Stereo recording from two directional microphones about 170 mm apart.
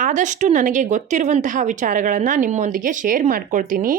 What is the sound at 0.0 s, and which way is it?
Speech, 45° right (ahead or behind).